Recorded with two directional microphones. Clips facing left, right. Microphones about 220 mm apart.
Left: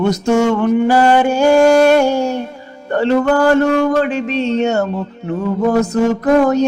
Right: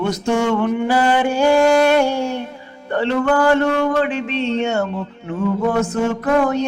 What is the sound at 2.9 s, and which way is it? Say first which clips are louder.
Speech: left 4 dB; 40° left (ahead or behind).